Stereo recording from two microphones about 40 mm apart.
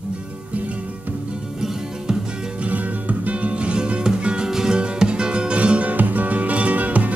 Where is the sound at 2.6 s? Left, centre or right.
Right.